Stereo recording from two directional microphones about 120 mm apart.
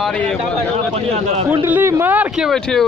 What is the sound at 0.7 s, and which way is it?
Speech, 60° right (ahead or behind).